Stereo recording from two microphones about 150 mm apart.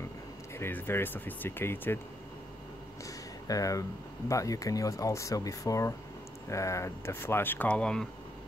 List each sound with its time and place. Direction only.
0.6 s speech: 15° left (ahead or behind)
3.4 s speech: 20° left (ahead or behind); by 8.1 s 5° left (ahead or behind)